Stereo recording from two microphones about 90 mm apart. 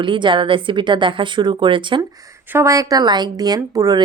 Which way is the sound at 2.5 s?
30° right (ahead or behind).